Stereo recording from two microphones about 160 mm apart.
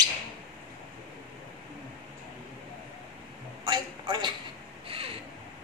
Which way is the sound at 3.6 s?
30° right (ahead or behind).